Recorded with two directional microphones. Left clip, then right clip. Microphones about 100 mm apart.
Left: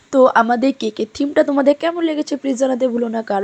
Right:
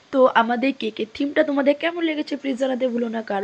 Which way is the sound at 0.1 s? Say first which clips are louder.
Left 5 dB; 75° left (ahead or behind).